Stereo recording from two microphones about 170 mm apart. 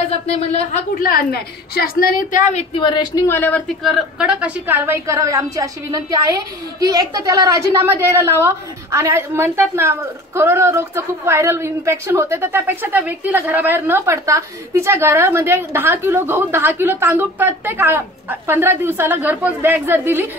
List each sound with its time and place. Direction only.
0.9 s a woman's voice: 60° left (ahead or behind)
2.7 s a man's voice: 25° left (ahead or behind); by 20.2 s 10° right (ahead or behind)